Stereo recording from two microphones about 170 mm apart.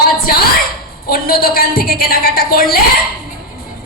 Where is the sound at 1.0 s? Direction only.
60° left (ahead or behind).